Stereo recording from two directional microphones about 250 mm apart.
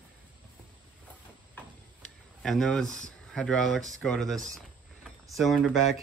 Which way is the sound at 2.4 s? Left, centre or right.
Centre.